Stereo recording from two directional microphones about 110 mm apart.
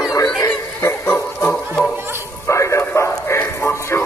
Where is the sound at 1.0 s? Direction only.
15° left (ahead or behind).